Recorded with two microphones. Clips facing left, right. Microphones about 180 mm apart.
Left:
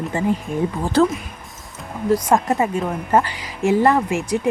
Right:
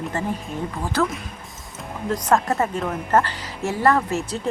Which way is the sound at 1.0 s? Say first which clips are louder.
Left 7 dB; 30° left (ahead or behind).